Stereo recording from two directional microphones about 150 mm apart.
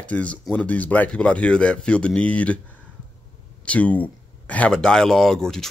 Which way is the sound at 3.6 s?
10° left (ahead or behind).